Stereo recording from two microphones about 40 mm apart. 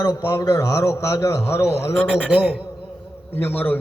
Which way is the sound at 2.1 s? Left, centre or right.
Right.